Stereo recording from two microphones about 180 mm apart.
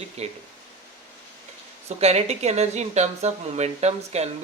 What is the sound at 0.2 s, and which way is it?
Speech, 35° right (ahead or behind).